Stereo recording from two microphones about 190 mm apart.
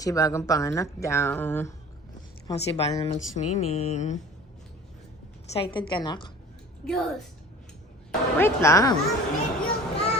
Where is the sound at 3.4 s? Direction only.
35° left (ahead or behind).